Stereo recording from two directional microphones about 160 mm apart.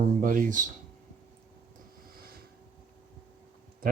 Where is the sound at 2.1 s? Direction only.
70° right (ahead or behind).